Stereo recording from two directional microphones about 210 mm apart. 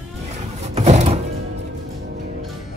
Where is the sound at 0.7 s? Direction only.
30° right (ahead or behind).